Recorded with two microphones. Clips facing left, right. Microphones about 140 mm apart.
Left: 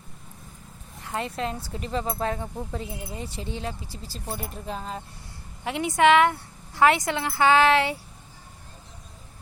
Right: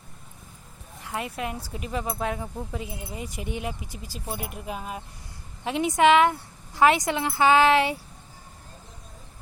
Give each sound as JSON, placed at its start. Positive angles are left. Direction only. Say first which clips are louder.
{"t": 1.0, "sound": "a woman's voice", "louder": "left 2 dB", "side_deg": -15}